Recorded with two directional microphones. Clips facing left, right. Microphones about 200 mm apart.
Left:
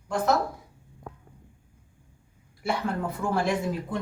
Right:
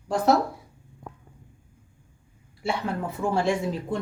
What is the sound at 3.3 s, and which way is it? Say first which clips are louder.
Speech: right 2 dB; 25° right (ahead or behind).